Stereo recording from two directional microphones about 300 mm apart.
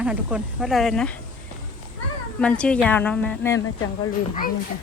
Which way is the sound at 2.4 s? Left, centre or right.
Centre.